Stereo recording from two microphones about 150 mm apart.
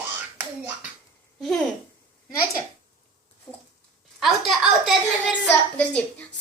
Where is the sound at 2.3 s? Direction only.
20° left (ahead or behind).